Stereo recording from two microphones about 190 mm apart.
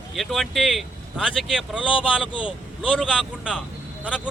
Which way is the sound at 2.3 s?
25° left (ahead or behind).